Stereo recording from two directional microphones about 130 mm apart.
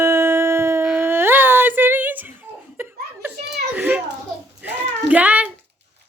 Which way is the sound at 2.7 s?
15° right (ahead or behind).